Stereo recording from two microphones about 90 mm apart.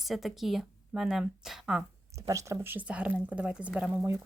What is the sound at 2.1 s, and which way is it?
Speech, 35° right (ahead or behind).